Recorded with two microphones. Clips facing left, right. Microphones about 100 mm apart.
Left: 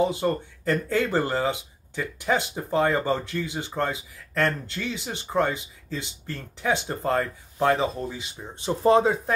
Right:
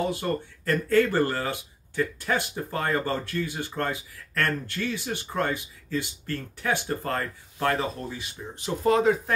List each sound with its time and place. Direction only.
0.0 s speech: 20° left (ahead or behind)